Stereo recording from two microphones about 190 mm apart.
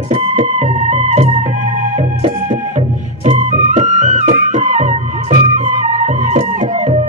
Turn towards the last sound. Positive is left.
turn(degrees=-35)  # may be behind; listen again after turning